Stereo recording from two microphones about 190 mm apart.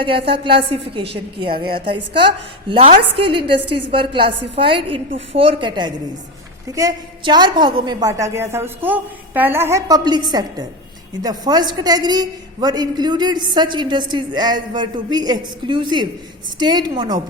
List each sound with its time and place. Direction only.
0.0 s a woman's voice: 30° right (ahead or behind)
2.6 s a woman's voice: 30° right (ahead or behind)